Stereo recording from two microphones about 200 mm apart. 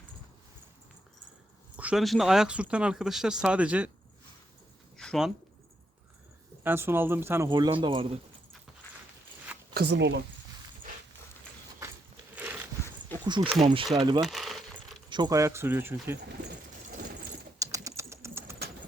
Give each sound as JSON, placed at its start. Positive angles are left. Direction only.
{"t": 1.7, "sound": "speech", "side_deg": -5}
{"t": 4.9, "sound": "a sound", "side_deg": 0}
{"t": 6.6, "sound": "a man's voice", "side_deg": -10}
{"t": 9.7, "sound": "speech", "side_deg": -60}
{"t": 12.3, "sound": "a sound", "side_deg": -10}
{"t": 13.2, "sound": "speech", "side_deg": -20}
{"t": 14.2, "sound": "keys jangling", "side_deg": 0}
{"t": 15.1, "sound": "a man's voice", "side_deg": -20}
{"t": 17.6, "sound": "typing", "side_deg": -15}